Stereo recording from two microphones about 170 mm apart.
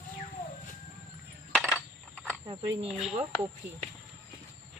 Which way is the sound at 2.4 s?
30° right (ahead or behind).